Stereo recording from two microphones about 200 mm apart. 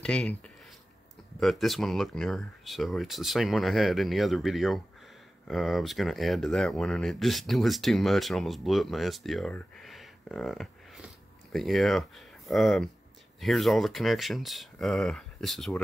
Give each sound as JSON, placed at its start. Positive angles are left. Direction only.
{"t": 0.0, "sound": "speech", "side_deg": 5}